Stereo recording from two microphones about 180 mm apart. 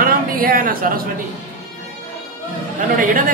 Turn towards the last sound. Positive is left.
turn(degrees=-50)  # may be behind; listen again after turning